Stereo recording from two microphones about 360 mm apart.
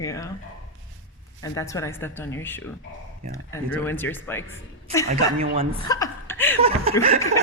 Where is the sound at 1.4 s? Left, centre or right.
Centre.